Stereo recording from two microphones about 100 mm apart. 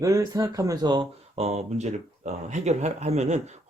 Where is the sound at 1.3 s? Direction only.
90° right.